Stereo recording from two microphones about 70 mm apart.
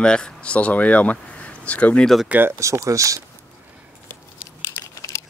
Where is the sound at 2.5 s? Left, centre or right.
Right.